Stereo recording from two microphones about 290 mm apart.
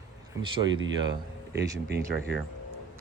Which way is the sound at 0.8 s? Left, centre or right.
Right.